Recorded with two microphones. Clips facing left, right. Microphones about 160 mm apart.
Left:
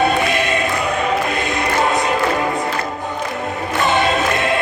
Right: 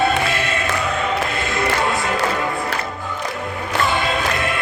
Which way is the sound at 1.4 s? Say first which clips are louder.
Left 2 dB; 20° left (ahead or behind).